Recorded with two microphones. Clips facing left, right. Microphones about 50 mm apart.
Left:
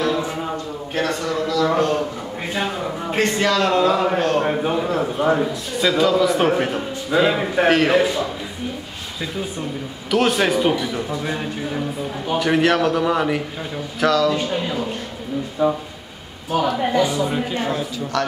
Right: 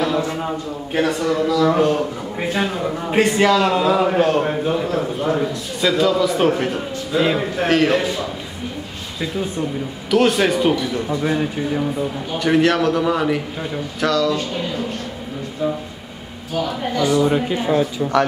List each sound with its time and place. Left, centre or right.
0.9 s a man's voice: centre
4.5 s a man's voice: centre
10.1 s a man's voice: centre
15.6 s a man's voice: centre
16.5 s a man's voice: centre
17.2 s a man's voice: centre